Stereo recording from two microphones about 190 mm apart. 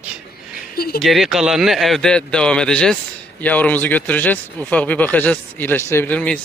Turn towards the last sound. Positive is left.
turn(degrees=5)  # may be behind; listen again after turning